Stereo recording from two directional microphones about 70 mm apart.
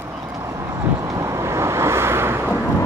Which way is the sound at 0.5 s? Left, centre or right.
Right.